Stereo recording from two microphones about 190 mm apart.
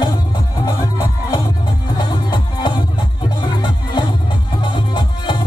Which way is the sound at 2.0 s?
20° left (ahead or behind).